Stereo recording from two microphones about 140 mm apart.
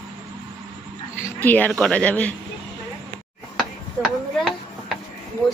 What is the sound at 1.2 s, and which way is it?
Dog, 10° left (ahead or behind).